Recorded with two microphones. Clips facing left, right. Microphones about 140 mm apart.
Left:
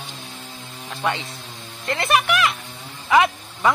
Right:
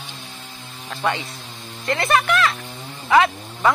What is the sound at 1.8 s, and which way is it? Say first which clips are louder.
Speech: right 1 dB; 25° left (ahead or behind).